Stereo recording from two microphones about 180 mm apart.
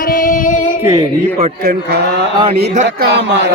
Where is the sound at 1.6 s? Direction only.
60° right (ahead or behind).